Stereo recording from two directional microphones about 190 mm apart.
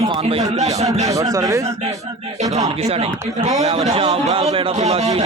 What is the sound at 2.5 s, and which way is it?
A man's voice, 35° right (ahead or behind).